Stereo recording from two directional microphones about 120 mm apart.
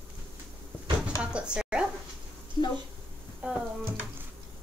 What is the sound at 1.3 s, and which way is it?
Speech, 10° right (ahead or behind).